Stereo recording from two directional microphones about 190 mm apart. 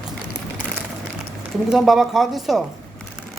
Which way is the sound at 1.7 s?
Centre (ahead or behind).